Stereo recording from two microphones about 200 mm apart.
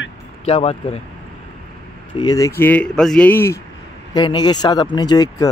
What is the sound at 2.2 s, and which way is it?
Speech, 15° left (ahead or behind).